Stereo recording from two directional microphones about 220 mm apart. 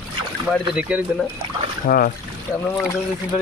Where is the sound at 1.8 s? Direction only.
40° left (ahead or behind).